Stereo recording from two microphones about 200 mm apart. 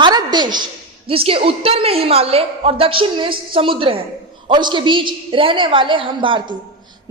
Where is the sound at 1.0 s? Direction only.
30° right (ahead or behind).